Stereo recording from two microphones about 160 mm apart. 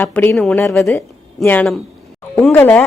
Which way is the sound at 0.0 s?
15° left (ahead or behind).